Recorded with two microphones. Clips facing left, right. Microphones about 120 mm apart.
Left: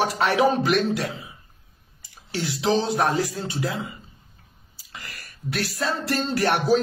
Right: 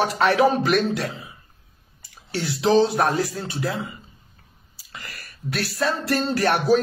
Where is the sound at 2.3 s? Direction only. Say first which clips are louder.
Right 3 dB; 20° left (ahead or behind).